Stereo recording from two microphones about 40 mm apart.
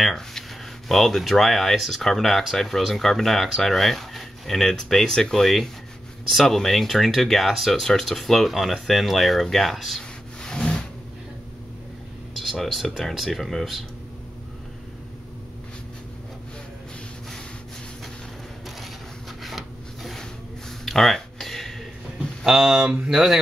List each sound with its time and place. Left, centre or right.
0.0 s a sound: centre
1.3 s speech: centre
10.4 s rub: centre
12.5 s speech: centre
19.4 s a sound: centre
22.4 s speech: centre